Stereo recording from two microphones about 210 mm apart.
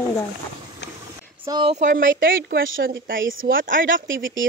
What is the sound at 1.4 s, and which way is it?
Speech, 20° right (ahead or behind).